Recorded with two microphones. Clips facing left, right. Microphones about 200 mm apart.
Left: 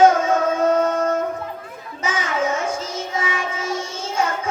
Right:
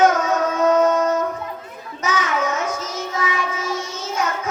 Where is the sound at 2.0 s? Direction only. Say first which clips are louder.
Even; 30° left (ahead or behind).